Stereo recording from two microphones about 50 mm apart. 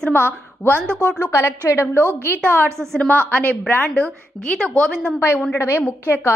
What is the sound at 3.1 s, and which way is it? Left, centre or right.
Speech, left.